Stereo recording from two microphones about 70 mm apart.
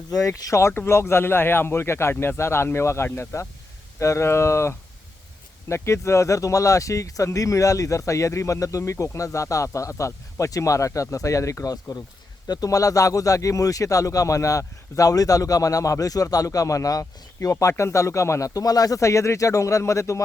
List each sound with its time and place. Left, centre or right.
0.4 s speech: left